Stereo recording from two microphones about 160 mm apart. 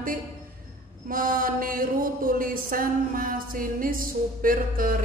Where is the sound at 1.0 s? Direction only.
60° right (ahead or behind).